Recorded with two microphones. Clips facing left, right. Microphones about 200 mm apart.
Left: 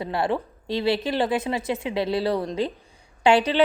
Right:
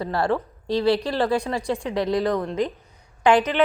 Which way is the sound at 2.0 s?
30° left (ahead or behind).